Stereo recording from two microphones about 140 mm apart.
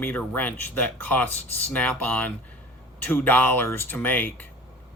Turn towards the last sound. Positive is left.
turn(degrees=15)  # may be behind; listen again after turning